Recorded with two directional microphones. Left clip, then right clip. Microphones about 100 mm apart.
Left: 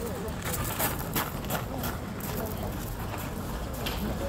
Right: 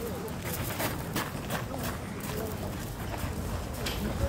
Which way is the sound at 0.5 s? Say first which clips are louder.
Left 2 dB; 75° left (ahead or behind).